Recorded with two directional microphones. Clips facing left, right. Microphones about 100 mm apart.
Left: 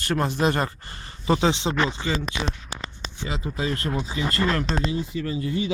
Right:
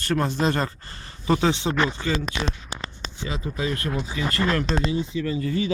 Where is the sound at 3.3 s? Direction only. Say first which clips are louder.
Even; 30° left (ahead or behind).